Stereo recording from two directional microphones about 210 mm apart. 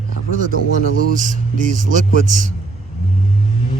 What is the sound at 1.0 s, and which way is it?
Speech, 40° right (ahead or behind).